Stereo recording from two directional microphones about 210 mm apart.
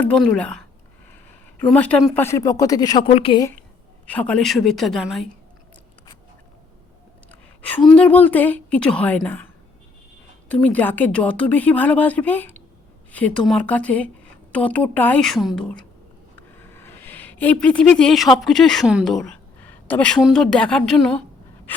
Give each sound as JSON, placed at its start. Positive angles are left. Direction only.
{"t": 0.0, "sound": "a woman's voice", "side_deg": 5}
{"t": 1.6, "sound": "a woman's voice", "side_deg": 5}
{"t": 2.2, "sound": "a woman's voice", "side_deg": 15}
{"t": 4.0, "sound": "a woman's voice", "side_deg": 5}
{"t": 7.6, "sound": "a woman's voice", "side_deg": 5}
{"t": 10.5, "sound": "a woman's voice", "side_deg": 5}